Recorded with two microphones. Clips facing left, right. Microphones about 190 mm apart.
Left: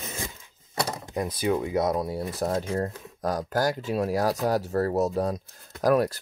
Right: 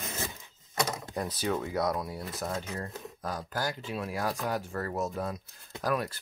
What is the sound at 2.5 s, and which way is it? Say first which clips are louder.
Speech: left 10 dB; 40° left (ahead or behind).